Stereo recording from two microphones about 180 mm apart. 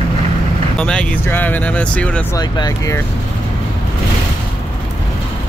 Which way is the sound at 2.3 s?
20° left (ahead or behind).